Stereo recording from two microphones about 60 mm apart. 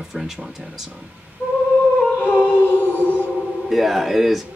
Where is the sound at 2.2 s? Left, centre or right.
Left.